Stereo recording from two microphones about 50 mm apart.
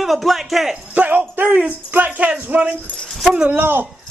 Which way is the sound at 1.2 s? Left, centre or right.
Right.